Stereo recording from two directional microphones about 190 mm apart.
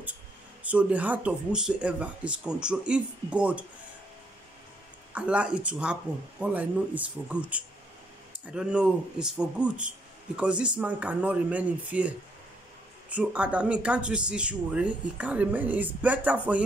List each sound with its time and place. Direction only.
0.7 s speech: 5° right (ahead or behind)
5.1 s speech: 5° right (ahead or behind)